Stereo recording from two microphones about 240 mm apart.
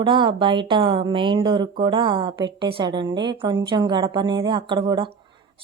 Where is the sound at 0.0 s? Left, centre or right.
Centre.